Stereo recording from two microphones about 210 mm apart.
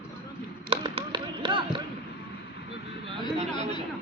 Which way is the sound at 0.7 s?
25° right (ahead or behind).